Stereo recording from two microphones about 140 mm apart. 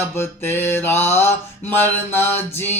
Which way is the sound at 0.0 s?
15° left (ahead or behind).